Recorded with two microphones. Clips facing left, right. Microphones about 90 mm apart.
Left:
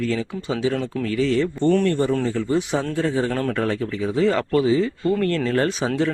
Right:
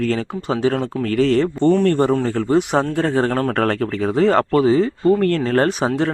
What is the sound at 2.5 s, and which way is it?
Speech, 60° right (ahead or behind).